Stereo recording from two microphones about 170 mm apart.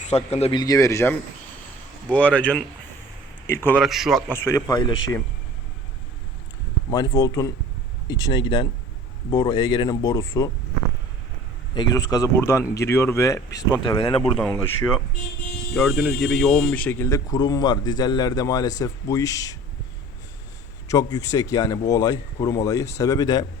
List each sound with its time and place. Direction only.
0.0 s speech: 40° left (ahead or behind)
0.6 s speech: 20° left (ahead or behind)
2.1 s a man's voice: 10° left (ahead or behind)
3.8 s speech: centre (ahead or behind)
4.3 s speech: 15° left (ahead or behind)
6.9 s speech: 20° left (ahead or behind)
11.7 s speech: 25° left (ahead or behind)
15.7 s speech: centre (ahead or behind); by 19.5 s 20° left (ahead or behind)
20.8 s speech: 20° left (ahead or behind)